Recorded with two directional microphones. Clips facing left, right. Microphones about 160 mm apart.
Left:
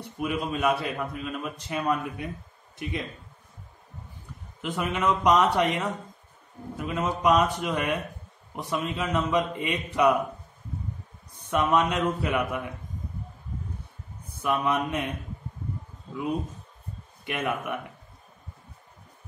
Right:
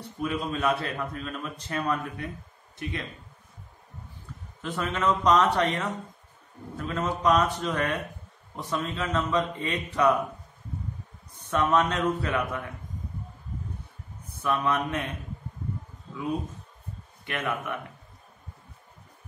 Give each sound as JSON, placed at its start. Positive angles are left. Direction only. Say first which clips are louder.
{"t": 0.2, "sound": "a man's voice", "louder": "left 1 dB", "side_deg": 10}
{"t": 4.6, "sound": "a man's voice", "louder": "left 1 dB", "side_deg": 15}
{"t": 11.5, "sound": "a man's voice", "louder": "left 1 dB", "side_deg": 15}
{"t": 14.4, "sound": "a man's voice", "louder": "left 1 dB", "side_deg": 15}
{"t": 17.2, "sound": "speech", "louder": "left 2 dB", "side_deg": 15}